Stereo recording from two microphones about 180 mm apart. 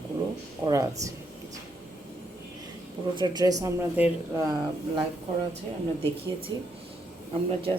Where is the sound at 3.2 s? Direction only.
20° right (ahead or behind).